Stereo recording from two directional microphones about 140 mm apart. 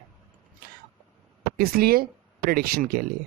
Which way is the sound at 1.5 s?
90° right.